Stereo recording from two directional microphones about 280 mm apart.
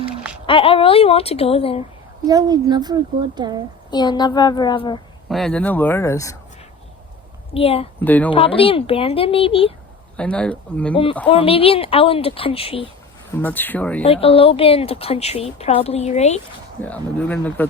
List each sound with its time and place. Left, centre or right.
0.4 s speech: centre
2.2 s a child's voice: centre
3.9 s speech: centre
5.3 s speech: centre
7.5 s speech: left
8.0 s speech: centre
8.3 s speech: centre
10.2 s speech: centre
10.9 s speech: centre
13.3 s speech: centre
14.0 s speech: centre
16.8 s speech: centre